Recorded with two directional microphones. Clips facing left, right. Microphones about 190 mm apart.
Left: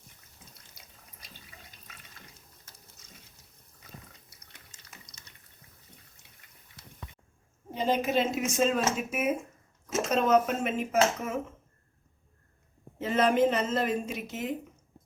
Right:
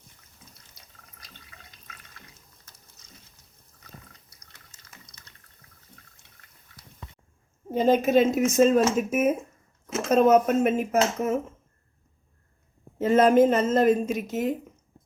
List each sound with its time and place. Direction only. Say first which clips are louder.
7.7 s speech: right 8 dB; 45° right (ahead or behind)
13.0 s speech: right 6 dB; 45° right (ahead or behind)